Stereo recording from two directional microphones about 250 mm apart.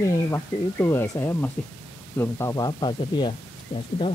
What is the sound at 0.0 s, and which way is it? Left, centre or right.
Speech, centre.